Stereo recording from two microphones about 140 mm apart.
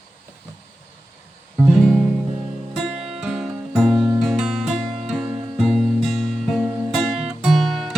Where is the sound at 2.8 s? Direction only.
5° right (ahead or behind).